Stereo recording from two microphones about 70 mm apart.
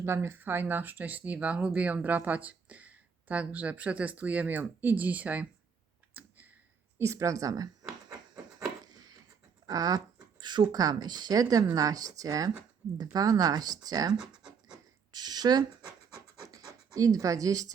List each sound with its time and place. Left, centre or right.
0.0 s speech: right
6.1 s clicking: right
7.0 s speech: right
8.9 s a sound: right
9.6 s speech: right
10.4 s speech: right
14.2 s scratch: centre
15.1 s speech: right
16.5 s pant: right